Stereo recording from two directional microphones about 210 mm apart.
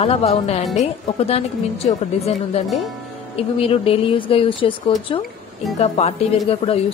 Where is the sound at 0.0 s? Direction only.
30° left (ahead or behind).